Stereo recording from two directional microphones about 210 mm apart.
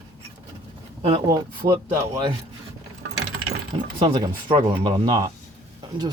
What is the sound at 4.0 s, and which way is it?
Speech, 20° right (ahead or behind).